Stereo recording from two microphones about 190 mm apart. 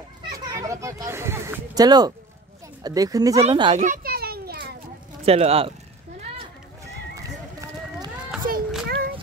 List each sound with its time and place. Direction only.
0.3 s a sound: 15° right (ahead or behind)
2.8 s speech: 20° right (ahead or behind)
3.4 s speech: 30° right (ahead or behind)
3.8 s children playing: 50° right (ahead or behind)
5.2 s speech: 30° right (ahead or behind)
7.2 s run: 20° right (ahead or behind)
8.5 s a sound: 50° right (ahead or behind)